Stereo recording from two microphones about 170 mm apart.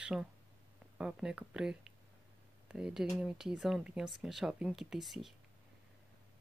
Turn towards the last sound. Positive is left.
turn(degrees=0)  # may be behind; listen again after turning